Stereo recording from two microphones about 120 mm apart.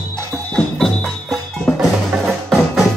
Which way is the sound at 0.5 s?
5° left (ahead or behind).